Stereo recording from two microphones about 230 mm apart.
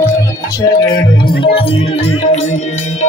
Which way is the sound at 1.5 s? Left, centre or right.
Left.